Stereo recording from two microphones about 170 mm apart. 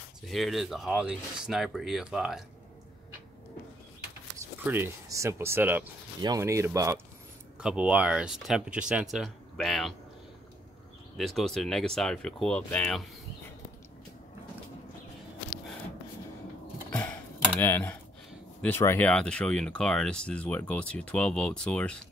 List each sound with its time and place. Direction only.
0.3 s speech: centre (ahead or behind)
4.6 s speech: 15° right (ahead or behind)
7.6 s speech: 5° right (ahead or behind)
11.1 s speech: centre (ahead or behind)
16.9 s a sound: 10° left (ahead or behind)
18.6 s speech: 15° left (ahead or behind)